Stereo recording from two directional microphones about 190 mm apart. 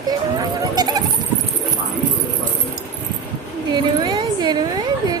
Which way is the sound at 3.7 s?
25° right (ahead or behind).